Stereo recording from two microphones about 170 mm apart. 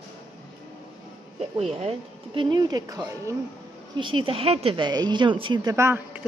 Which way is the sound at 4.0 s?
30° right (ahead or behind).